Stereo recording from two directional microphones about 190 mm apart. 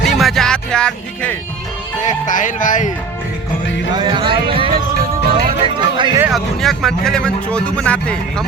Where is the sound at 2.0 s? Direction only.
40° left (ahead or behind).